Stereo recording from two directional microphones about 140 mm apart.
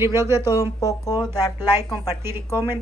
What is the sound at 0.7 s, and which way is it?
Speech, 25° left (ahead or behind).